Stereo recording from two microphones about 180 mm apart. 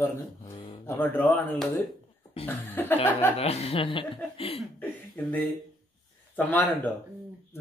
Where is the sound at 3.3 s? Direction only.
35° left (ahead or behind).